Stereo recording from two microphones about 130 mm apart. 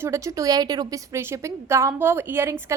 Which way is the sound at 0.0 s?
25° right (ahead or behind).